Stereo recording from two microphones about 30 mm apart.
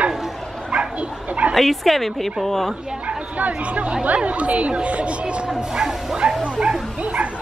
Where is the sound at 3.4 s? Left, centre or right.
Right.